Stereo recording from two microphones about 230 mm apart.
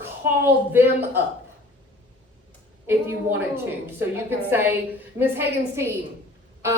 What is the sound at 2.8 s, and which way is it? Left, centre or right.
A woman's voice, centre.